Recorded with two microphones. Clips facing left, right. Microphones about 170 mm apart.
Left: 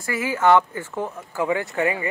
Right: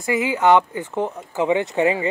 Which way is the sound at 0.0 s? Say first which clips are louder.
Right 2 dB; 20° right (ahead or behind).